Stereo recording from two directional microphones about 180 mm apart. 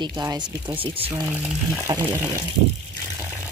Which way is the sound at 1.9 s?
20° right (ahead or behind).